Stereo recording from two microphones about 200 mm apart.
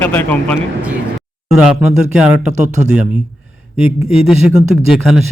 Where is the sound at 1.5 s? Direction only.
5° right (ahead or behind).